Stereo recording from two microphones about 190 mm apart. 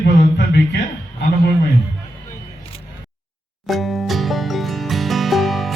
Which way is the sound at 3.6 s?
Centre (ahead or behind).